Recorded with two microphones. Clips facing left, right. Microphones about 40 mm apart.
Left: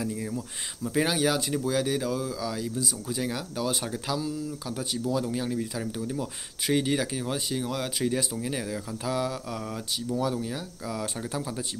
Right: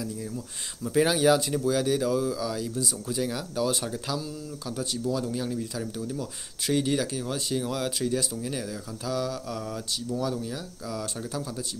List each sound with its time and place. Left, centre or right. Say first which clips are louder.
0.8 s speech: right 4 dB; centre
7.4 s speech: right 2 dB; centre
8.0 s speech: even; left